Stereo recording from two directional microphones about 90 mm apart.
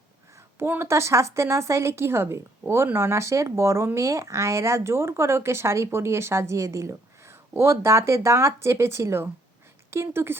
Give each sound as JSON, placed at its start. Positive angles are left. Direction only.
{"t": 0.3, "sound": "a woman's voice", "side_deg": -25}